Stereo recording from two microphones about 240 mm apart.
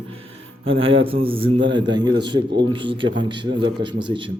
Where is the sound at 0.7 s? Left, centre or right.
Right.